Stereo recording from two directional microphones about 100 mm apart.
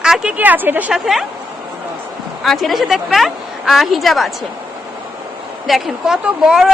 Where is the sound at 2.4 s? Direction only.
Centre (ahead or behind).